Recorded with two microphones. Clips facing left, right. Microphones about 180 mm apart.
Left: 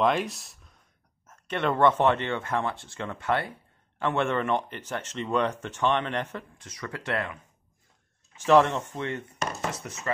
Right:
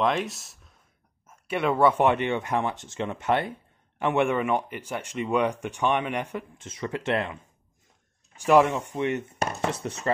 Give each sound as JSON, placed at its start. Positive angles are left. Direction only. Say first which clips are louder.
{"t": 0.0, "sound": "speech", "louder": "left 1 dB", "side_deg": 0}
{"t": 6.6, "sound": "speech", "louder": "right 6 dB", "side_deg": -25}
{"t": 8.5, "sound": "speech", "louder": "right 1 dB", "side_deg": -10}